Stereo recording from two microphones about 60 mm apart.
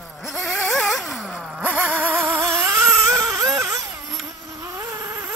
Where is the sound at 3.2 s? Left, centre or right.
Right.